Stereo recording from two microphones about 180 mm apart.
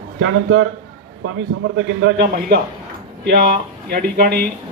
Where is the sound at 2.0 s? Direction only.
65° right (ahead or behind).